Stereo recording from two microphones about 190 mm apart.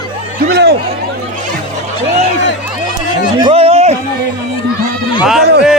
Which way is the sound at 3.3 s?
30° right (ahead or behind).